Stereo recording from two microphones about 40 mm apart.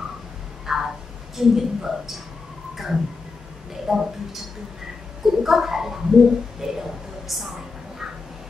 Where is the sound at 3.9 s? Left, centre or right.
Centre.